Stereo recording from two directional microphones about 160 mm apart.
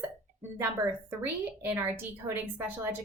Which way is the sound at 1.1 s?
10° right (ahead or behind).